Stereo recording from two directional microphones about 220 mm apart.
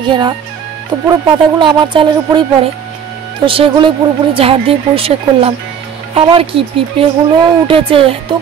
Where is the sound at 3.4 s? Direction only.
25° right (ahead or behind).